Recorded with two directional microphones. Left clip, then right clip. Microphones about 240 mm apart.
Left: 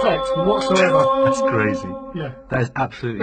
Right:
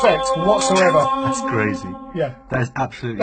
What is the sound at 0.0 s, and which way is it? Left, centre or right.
Speech, right.